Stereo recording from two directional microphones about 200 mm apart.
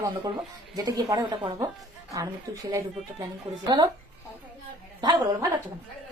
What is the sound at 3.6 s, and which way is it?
Speech, 20° right (ahead or behind).